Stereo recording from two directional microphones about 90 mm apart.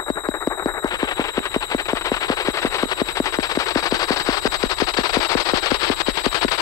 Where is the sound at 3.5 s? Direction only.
40° left (ahead or behind).